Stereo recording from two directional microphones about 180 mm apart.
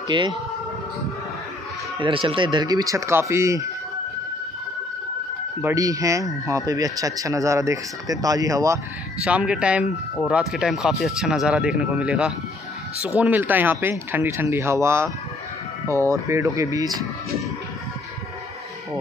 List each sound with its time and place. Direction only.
0.1 s speech: 25° right (ahead or behind)
2.0 s speech: 30° right (ahead or behind)
5.6 s speech: 15° right (ahead or behind)
9.2 s speech: 5° right (ahead or behind)